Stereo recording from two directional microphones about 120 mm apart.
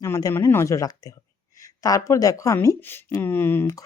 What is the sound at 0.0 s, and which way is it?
Speech, 25° left (ahead or behind).